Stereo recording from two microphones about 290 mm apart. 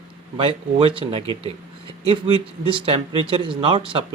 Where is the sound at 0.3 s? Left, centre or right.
Centre.